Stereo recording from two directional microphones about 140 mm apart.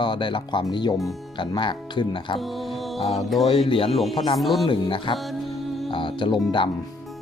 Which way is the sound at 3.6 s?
45° left (ahead or behind).